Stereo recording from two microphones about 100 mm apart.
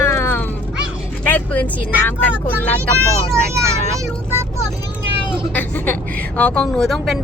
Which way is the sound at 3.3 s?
30° right (ahead or behind).